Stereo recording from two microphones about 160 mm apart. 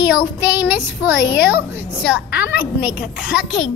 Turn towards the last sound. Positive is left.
turn(degrees=-5)  # may be behind; listen again after turning